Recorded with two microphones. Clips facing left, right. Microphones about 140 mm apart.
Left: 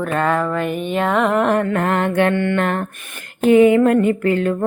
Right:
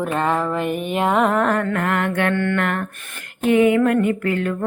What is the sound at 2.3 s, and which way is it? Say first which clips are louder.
Mantra: left 2 dB; 15° left (ahead or behind).